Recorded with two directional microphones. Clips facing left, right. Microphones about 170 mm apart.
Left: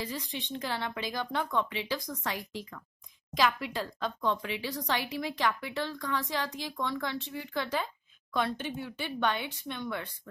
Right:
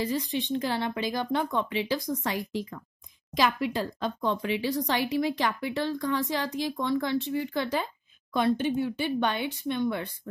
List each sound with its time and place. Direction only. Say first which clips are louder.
0.0 s speech: right 8 dB; 30° right (ahead or behind)
8.3 s speech: right 7 dB; 15° right (ahead or behind)
9.4 s speech: right 9 dB; 25° right (ahead or behind)